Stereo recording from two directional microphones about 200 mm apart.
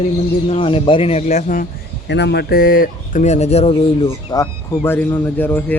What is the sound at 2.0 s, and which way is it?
Speech, 60° left (ahead or behind).